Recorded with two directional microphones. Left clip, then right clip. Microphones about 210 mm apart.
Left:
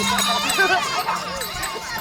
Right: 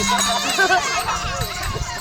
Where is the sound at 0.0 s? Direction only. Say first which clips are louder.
Right 1 dB; 5° right (ahead or behind).